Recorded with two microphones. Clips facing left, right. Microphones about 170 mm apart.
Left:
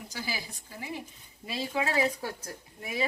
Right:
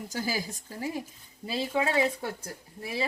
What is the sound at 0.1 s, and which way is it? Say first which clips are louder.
Speech: right 6 dB; 45° right (ahead or behind).